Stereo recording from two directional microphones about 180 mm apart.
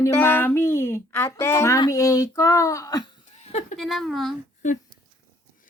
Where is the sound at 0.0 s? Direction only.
15° left (ahead or behind).